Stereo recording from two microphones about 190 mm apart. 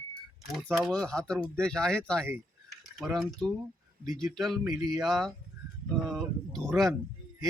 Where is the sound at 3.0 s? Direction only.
Centre (ahead or behind).